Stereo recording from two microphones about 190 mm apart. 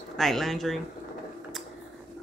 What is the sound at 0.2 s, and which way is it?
Speech, centre (ahead or behind).